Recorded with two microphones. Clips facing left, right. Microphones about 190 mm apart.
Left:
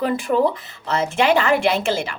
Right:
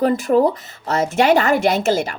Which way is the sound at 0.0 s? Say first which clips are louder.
Right 4 dB; 40° right (ahead or behind).